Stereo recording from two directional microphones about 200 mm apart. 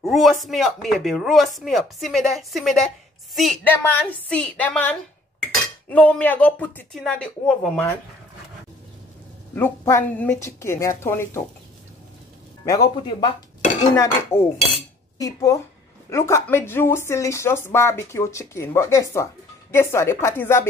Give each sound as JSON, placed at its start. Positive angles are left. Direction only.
{"t": 0.0, "sound": "speech", "side_deg": 0}
{"t": 9.6, "sound": "speech", "side_deg": 10}
{"t": 12.6, "sound": "speech", "side_deg": 20}